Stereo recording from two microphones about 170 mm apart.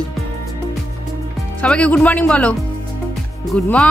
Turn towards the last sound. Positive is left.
turn(degrees=5)  # may be behind; listen again after turning